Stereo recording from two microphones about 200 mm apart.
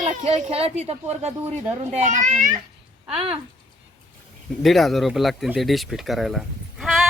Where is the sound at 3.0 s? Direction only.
5° right (ahead or behind).